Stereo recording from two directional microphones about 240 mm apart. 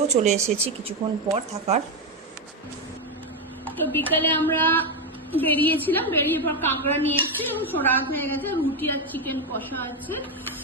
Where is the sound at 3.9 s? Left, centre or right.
Centre.